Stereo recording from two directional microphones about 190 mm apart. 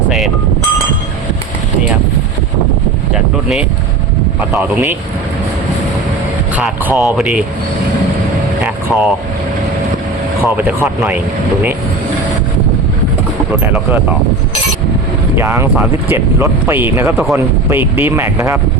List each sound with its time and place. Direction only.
4.4 s speech: 5° right (ahead or behind)
6.6 s speech: 5° right (ahead or behind)
8.6 s vehicle: centre (ahead or behind)
10.4 s speech: 10° right (ahead or behind)
15.4 s speech: 15° right (ahead or behind)